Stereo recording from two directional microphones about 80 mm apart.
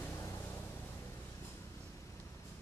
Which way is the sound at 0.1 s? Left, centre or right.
Left.